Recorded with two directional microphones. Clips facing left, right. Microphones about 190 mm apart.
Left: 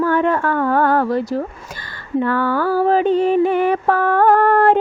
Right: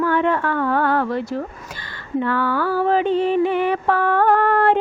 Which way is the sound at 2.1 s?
45° left (ahead or behind).